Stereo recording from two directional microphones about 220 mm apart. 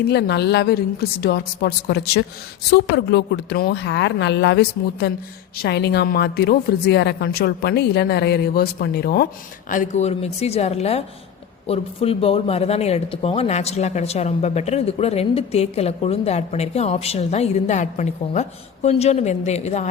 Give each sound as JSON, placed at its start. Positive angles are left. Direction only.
{"t": 0.1, "sound": "a woman's voice", "side_deg": 50}